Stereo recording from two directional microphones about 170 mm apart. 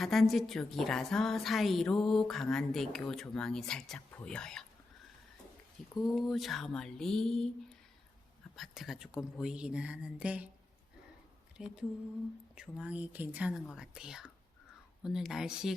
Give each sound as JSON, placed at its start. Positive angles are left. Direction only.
{"t": 0.0, "sound": "a woman's voice", "side_deg": 0}
{"t": 6.0, "sound": "a woman's voice", "side_deg": 0}
{"t": 8.5, "sound": "a woman's voice", "side_deg": 0}
{"t": 11.5, "sound": "a woman's voice", "side_deg": -5}